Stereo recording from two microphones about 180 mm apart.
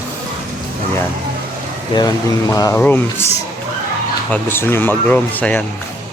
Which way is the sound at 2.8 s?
10° left (ahead or behind).